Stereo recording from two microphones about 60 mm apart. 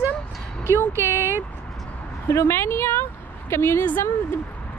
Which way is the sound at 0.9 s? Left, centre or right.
Right.